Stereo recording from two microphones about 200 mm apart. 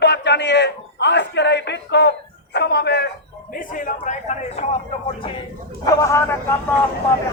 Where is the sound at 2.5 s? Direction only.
55° left (ahead or behind).